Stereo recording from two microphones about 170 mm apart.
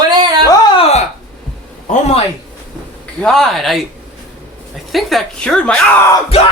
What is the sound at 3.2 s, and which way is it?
Speech, centre (ahead or behind).